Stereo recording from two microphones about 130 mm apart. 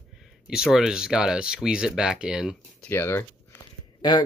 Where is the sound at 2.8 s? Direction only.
20° left (ahead or behind).